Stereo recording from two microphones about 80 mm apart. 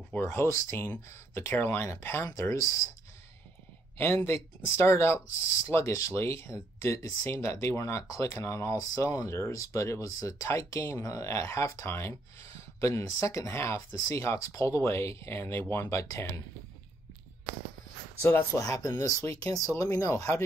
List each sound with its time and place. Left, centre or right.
0.2 s speech: left
4.0 s speech: left
8.7 s speech: left
18.2 s speech: left
18.6 s speech: left